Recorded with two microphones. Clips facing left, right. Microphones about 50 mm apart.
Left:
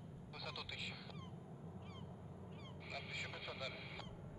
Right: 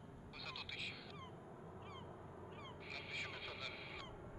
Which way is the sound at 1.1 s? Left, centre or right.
Right.